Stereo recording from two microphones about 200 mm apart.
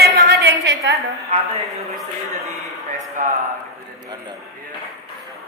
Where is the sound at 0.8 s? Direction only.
15° right (ahead or behind).